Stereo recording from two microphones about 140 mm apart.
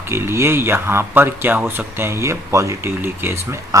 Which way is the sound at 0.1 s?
20° right (ahead or behind).